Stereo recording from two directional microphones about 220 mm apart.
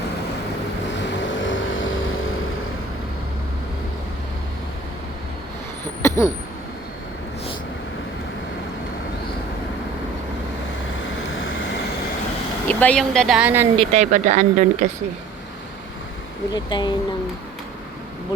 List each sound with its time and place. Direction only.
1.3 s vehicle: 60° left (ahead or behind)
6.0 s vehicle: 15° left (ahead or behind)
12.6 s speech: 5° left (ahead or behind)
13.7 s speech: 30° right (ahead or behind)
16.5 s speech: 20° left (ahead or behind)